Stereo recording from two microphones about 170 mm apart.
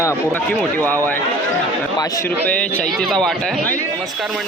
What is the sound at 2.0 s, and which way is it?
Speech, 20° left (ahead or behind).